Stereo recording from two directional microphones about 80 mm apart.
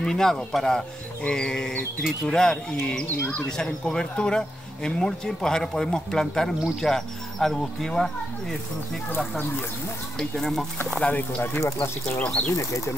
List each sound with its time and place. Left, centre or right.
0.0 s speech: centre
10.1 s speech: centre
11.0 s speech: centre
11.4 s speech: left
12.2 s speech: centre
12.5 s speech: left